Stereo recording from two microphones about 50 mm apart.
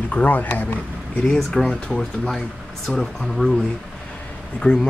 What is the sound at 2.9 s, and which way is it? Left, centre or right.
Speech, left.